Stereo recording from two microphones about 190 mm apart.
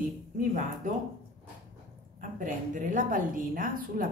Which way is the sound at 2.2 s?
45° right (ahead or behind).